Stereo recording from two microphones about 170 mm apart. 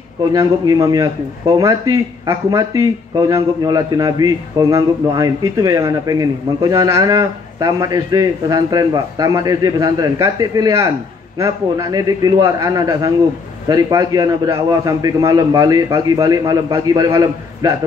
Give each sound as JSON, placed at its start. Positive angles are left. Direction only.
{"t": 0.3, "sound": "a man's voice", "side_deg": -20}
{"t": 2.2, "sound": "a man's voice", "side_deg": -20}